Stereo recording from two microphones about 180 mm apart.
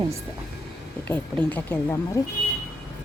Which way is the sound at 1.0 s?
10° left (ahead or behind).